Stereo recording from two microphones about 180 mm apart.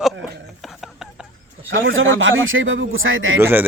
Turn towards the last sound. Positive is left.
turn(degrees=-15)  # may be behind; listen again after turning